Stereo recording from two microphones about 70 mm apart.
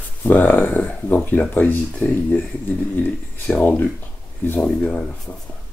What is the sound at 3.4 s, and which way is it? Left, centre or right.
Speech, left.